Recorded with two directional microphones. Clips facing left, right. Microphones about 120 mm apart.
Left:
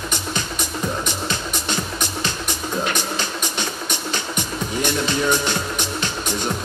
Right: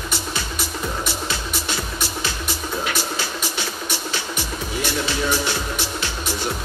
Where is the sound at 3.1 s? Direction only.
50° left (ahead or behind).